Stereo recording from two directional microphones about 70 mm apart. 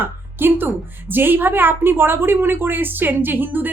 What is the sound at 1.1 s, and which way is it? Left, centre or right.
A woman's voice, right.